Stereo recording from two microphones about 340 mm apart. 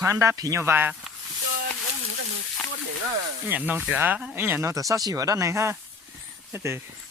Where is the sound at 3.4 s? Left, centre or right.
Centre.